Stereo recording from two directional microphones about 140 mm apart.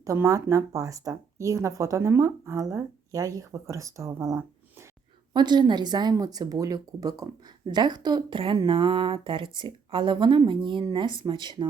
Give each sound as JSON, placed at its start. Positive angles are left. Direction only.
{"t": 0.0, "sound": "speech", "side_deg": -20}